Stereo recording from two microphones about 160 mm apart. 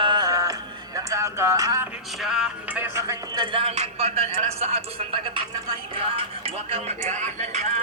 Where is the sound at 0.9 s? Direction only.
20° right (ahead or behind).